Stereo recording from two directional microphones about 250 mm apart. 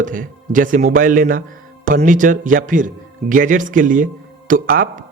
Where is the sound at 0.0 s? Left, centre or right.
Right.